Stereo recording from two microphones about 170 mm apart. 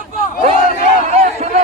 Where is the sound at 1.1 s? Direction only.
45° right (ahead or behind).